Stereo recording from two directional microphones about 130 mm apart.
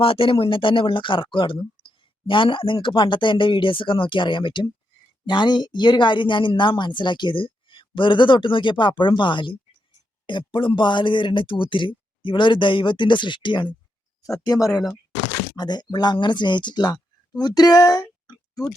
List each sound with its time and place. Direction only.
0.0 s speech: 45° left (ahead or behind); by 18.7 s 25° left (ahead or behind)